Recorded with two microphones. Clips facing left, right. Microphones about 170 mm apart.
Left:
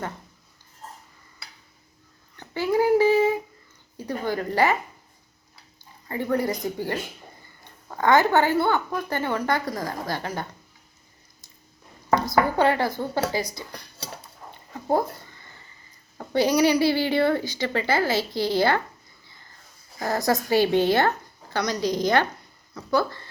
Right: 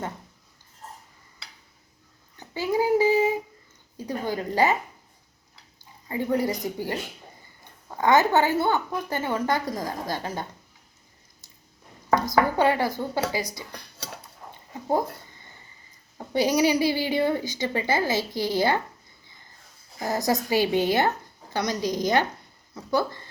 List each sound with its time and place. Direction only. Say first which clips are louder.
2.4 s a sound: left 3 dB; 15° right (ahead or behind)
3.9 s a woman's voice: left 1 dB; 15° right (ahead or behind)
6.1 s a woman's voice: even; 15° right (ahead or behind)
12.2 s a woman's voice: left 1 dB; 15° right (ahead or behind)
14.9 s a sound: left 2 dB; 15° right (ahead or behind)
16.6 s a woman's voice: left 3 dB; 20° right (ahead or behind)
20.0 s a woman's voice: left 1 dB; 15° right (ahead or behind)